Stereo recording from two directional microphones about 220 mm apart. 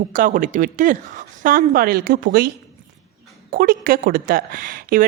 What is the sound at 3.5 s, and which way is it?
Speech, 40° right (ahead or behind).